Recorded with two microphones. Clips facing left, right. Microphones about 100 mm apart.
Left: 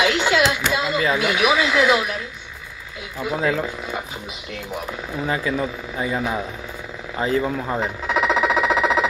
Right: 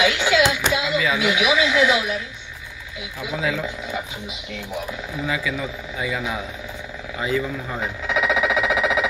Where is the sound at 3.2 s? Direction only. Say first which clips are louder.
Left 3 dB; 45° left (ahead or behind).